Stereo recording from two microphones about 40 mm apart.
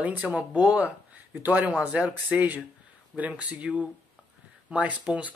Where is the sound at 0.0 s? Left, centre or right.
Right.